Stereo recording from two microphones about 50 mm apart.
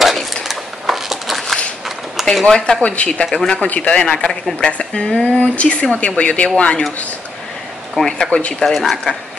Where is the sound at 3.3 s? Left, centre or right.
Centre.